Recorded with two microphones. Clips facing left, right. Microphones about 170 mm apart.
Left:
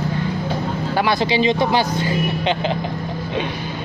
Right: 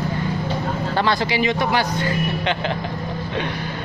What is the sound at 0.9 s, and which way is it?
Speech, 10° left (ahead or behind).